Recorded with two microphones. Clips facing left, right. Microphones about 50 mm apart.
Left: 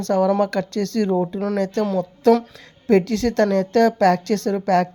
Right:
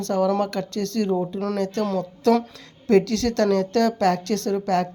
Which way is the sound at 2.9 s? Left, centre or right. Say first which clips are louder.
Left 1 dB; left.